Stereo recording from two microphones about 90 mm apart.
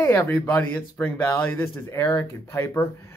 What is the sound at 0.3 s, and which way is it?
Speech, 20° left (ahead or behind).